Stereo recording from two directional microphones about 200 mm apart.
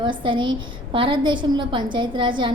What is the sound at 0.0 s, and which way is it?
A woman's voice, 25° right (ahead or behind).